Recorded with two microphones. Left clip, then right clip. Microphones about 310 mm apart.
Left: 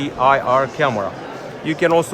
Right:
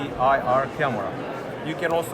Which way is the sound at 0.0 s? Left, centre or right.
Left.